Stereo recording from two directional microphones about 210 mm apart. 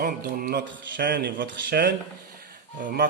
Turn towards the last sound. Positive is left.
turn(degrees=-40)  # may be behind; listen again after turning